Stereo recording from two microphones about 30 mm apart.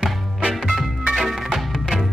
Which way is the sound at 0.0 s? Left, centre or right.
Right.